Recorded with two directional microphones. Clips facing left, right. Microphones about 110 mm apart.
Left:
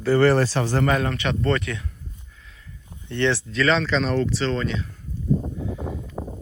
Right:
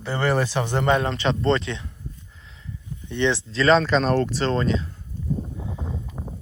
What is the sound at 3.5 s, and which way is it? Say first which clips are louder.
Speech: right 3 dB; 35° right (ahead or behind).